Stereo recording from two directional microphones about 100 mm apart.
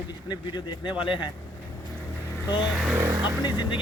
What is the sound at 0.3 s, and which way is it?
Speech, 50° left (ahead or behind).